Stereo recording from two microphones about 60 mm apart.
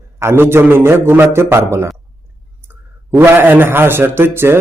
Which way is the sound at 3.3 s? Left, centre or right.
Right.